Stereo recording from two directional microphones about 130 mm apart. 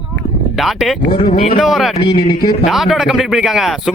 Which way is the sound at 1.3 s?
60° left (ahead or behind).